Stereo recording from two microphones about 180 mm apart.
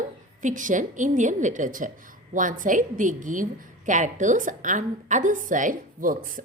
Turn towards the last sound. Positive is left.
turn(degrees=-50)  # may be behind; listen again after turning